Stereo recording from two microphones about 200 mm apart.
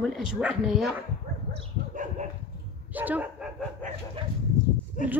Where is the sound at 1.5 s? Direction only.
35° right (ahead or behind).